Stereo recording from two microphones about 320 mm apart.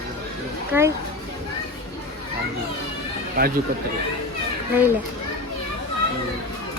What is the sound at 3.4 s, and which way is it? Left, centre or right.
Speech, right.